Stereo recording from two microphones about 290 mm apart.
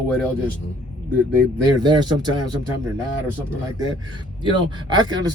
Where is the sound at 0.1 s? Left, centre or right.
Centre.